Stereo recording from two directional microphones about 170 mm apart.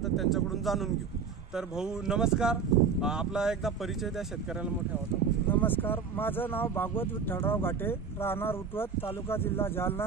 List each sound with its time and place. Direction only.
0.0 s speech: centre (ahead or behind)
5.5 s speech: 10° left (ahead or behind)